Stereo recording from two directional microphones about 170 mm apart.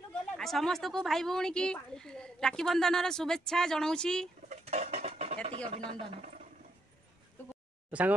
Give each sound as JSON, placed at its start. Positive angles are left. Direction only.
{"t": 0.4, "sound": "a woman's voice", "side_deg": 0}
{"t": 4.5, "sound": "dishes", "side_deg": -40}
{"t": 5.7, "sound": "speech", "side_deg": -30}
{"t": 7.9, "sound": "speech", "side_deg": -10}